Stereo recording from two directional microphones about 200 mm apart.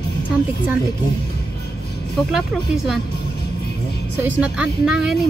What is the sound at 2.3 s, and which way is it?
Speech, centre (ahead or behind).